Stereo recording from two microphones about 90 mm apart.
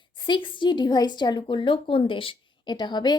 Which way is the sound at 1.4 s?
70° left (ahead or behind).